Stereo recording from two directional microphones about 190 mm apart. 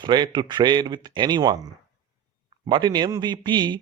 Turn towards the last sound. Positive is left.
turn(degrees=-25)  # may be behind; listen again after turning